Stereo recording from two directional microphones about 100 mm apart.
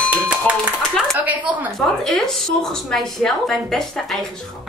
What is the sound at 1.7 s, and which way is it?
A woman's voice, 5° left (ahead or behind).